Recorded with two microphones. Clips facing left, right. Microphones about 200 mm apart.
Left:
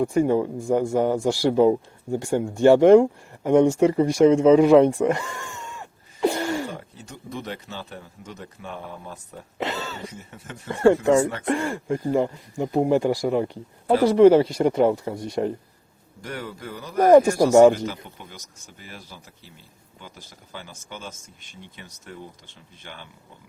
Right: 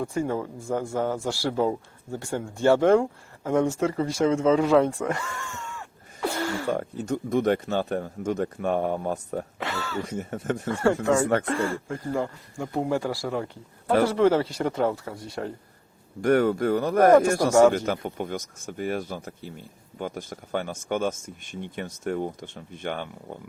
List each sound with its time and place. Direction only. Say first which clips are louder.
0.0 s speech: left 7 dB; 15° left (ahead or behind)
6.7 s speech: right 12 dB; 50° right (ahead or behind)
9.6 s a sound: left 3 dB; 20° left (ahead or behind)
10.1 s speech: right 12 dB; 50° right (ahead or behind)
10.7 s speech: left 6 dB; 15° left (ahead or behind)
16.2 s speech: right 14 dB; 55° right (ahead or behind)
17.1 s speech: left 6 dB; 15° left (ahead or behind)
17.7 s speech: right 5 dB; 55° right (ahead or behind)